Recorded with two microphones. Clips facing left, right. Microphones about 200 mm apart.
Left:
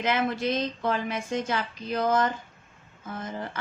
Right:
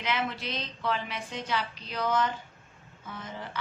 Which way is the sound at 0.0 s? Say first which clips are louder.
Left 6 dB; 50° left (ahead or behind).